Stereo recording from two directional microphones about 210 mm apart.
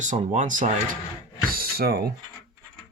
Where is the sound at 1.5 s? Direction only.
45° right (ahead or behind).